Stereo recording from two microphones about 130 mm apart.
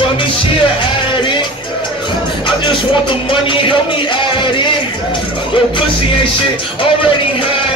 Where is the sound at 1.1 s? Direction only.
40° left (ahead or behind).